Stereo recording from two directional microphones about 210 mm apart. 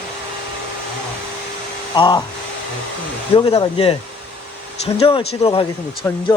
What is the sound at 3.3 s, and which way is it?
Speech, 30° left (ahead or behind).